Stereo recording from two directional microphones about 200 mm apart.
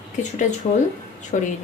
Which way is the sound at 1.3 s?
35° left (ahead or behind).